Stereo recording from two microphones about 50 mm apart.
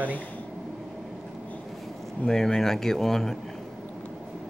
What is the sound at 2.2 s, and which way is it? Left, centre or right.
Speech, centre.